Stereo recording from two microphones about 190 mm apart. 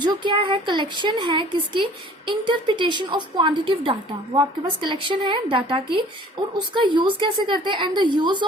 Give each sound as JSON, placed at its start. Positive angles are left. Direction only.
{"t": 0.0, "sound": "a woman's voice", "side_deg": -25}